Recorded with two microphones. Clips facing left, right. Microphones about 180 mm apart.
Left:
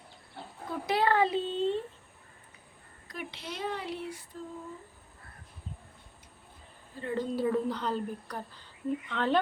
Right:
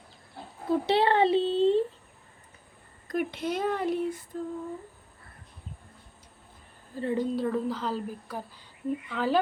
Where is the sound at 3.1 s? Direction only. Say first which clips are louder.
Right 11 dB; 50° right (ahead or behind).